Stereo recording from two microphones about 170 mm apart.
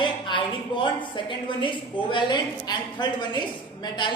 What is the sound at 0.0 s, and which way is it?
A woman's voice, 30° left (ahead or behind).